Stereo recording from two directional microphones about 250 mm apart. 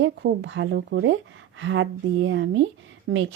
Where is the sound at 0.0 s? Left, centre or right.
Right.